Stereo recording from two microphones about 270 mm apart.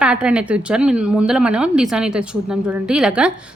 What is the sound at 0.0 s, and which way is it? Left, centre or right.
A woman's voice, centre.